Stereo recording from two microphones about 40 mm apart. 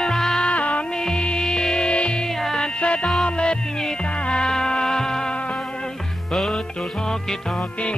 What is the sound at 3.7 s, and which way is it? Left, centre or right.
Music, centre.